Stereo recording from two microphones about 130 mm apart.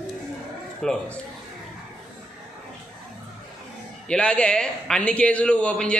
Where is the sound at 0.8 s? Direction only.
5° left (ahead or behind).